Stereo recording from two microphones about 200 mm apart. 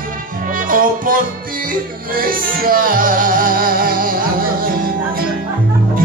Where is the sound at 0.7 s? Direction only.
45° right (ahead or behind).